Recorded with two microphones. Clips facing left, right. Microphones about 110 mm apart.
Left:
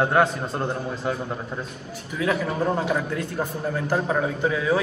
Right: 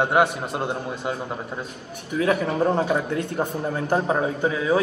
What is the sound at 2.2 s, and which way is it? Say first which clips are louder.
A man's voice: right 2 dB; 30° right (ahead or behind).